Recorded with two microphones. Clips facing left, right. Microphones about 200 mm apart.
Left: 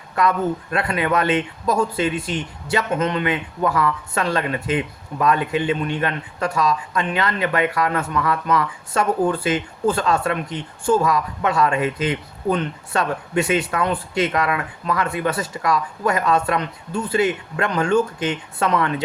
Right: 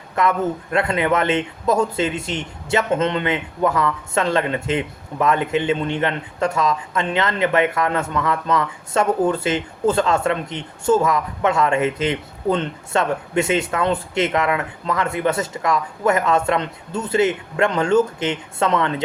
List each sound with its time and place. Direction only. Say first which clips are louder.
0.2 s a man's voice: even; 25° right (ahead or behind)